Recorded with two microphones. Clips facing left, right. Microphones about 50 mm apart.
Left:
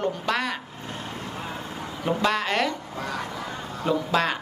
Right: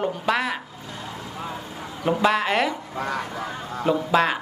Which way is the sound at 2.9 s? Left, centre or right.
Right.